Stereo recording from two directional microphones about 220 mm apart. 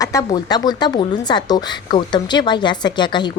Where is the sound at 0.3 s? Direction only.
20° left (ahead or behind).